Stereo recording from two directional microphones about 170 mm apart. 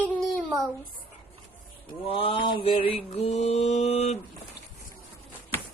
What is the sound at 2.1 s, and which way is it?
Speech, 30° left (ahead or behind).